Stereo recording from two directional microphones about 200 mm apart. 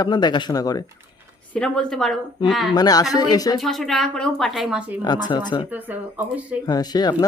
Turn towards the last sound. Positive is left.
turn(degrees=20)  # may be behind; listen again after turning